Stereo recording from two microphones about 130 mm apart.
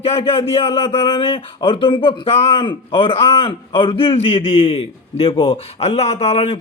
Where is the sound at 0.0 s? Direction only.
50° left (ahead or behind).